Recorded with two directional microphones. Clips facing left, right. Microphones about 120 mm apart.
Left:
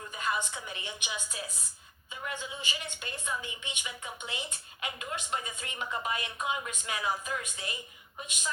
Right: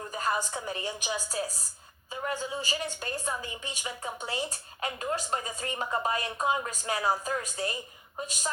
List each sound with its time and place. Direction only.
0.1 s a woman's voice: 40° right (ahead or behind)